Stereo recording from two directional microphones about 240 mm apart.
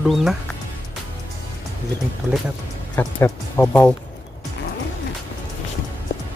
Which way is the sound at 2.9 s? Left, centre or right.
Centre.